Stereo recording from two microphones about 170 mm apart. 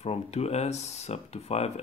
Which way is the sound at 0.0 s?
40° left (ahead or behind).